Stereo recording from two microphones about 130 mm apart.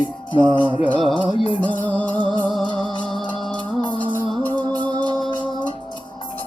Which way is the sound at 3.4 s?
5° left (ahead or behind).